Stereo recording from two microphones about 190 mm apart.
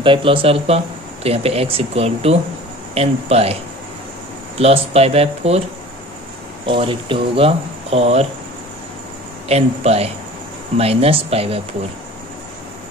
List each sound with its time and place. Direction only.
0.0 s speech: 25° right (ahead or behind)
4.6 s speech: 30° right (ahead or behind)
6.6 s speech: 25° right (ahead or behind)
9.5 s speech: 35° right (ahead or behind)